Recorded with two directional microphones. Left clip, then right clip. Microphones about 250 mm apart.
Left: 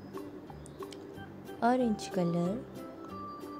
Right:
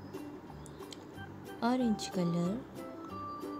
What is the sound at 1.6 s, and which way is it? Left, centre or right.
Speech, centre.